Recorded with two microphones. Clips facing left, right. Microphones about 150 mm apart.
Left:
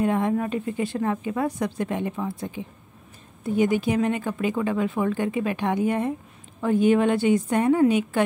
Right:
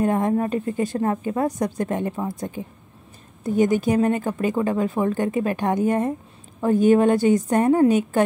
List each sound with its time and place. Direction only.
0.0 s a woman's voice: 40° right (ahead or behind)